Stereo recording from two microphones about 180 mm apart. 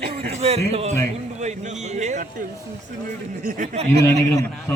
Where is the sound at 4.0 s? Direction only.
20° left (ahead or behind).